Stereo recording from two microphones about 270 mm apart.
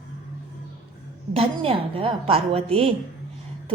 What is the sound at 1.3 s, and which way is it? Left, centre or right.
A woman's voice, right.